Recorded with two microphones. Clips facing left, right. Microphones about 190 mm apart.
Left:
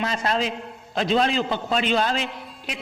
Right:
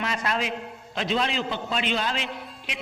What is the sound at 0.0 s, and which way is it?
A man's voice, 35° left (ahead or behind).